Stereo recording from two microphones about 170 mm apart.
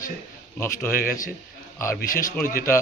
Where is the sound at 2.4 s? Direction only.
55° left (ahead or behind).